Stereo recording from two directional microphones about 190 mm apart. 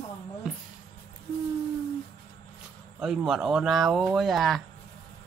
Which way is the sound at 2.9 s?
5° right (ahead or behind).